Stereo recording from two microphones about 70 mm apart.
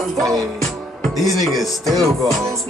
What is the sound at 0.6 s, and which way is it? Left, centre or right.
Music, centre.